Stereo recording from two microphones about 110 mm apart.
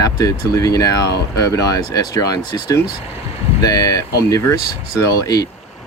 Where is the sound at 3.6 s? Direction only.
35° left (ahead or behind).